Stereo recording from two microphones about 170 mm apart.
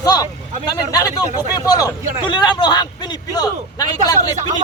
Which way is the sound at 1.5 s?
20° left (ahead or behind).